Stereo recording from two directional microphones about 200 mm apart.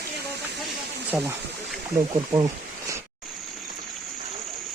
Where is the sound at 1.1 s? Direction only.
10° right (ahead or behind).